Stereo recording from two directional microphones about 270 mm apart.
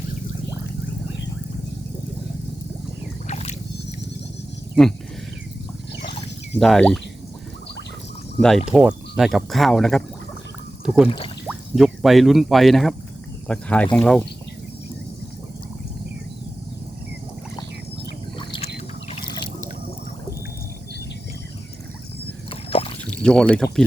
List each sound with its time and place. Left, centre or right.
3.2 s boat: left
4.7 s speech: centre
6.5 s speech: centre
8.4 s speech: centre
18.3 s boat: centre
19.1 s water: left
22.4 s rowboat: centre
23.2 s speech: centre